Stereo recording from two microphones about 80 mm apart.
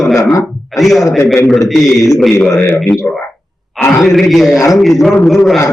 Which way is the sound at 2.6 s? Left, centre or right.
Left.